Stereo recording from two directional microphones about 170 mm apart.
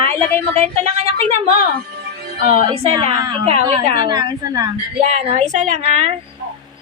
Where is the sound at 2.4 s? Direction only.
35° right (ahead or behind).